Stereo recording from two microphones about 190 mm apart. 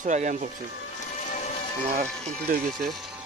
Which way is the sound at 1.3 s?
40° left (ahead or behind).